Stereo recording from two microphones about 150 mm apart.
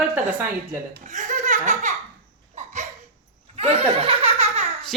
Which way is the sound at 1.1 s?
55° right (ahead or behind).